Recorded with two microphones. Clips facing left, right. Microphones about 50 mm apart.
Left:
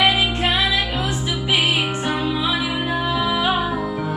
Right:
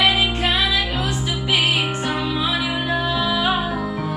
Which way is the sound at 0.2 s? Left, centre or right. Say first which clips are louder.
Even; centre.